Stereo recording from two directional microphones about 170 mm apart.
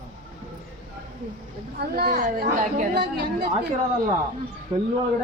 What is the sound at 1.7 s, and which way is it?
A man's voice, 65° right (ahead or behind).